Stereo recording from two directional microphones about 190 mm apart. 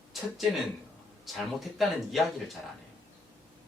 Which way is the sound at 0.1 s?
Centre (ahead or behind).